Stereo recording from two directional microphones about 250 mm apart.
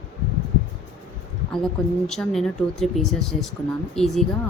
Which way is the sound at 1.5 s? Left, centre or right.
Centre.